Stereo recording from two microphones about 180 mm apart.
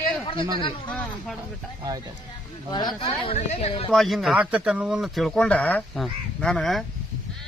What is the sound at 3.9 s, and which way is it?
Speech, centre (ahead or behind).